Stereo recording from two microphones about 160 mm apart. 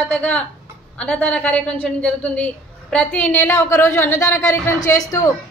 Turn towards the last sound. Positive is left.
turn(degrees=20)  # may be behind; listen again after turning